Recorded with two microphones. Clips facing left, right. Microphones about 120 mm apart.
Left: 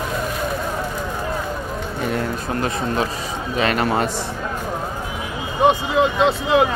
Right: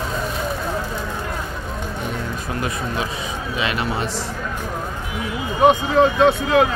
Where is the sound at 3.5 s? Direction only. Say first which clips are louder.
Left 5 dB; 45° left (ahead or behind).